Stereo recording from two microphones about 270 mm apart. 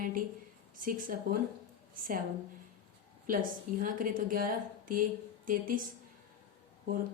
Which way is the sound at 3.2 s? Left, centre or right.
Right.